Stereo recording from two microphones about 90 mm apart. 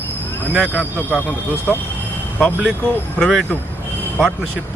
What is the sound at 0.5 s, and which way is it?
Speech, 20° right (ahead or behind).